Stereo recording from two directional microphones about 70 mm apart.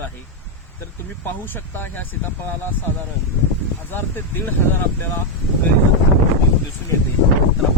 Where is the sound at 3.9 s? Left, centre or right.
Left.